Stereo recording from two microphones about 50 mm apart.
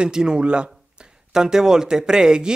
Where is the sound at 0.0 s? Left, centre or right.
Centre.